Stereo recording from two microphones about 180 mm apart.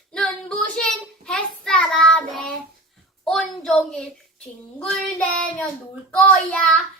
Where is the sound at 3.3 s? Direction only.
Centre (ahead or behind).